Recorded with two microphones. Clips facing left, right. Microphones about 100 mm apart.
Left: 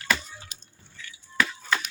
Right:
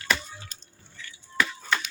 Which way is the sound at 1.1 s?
5° left (ahead or behind).